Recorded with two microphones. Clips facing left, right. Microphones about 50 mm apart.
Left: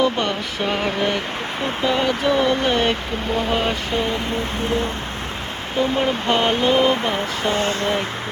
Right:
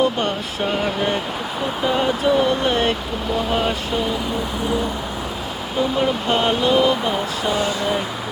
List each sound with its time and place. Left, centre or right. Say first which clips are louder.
6.3 s speech: left 1 dB; left
7.4 s speech: left 1 dB; left